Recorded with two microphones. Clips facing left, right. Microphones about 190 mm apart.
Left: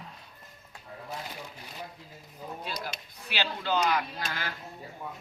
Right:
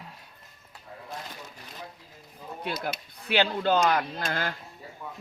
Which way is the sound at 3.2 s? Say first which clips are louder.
Right 8 dB; 55° right (ahead or behind).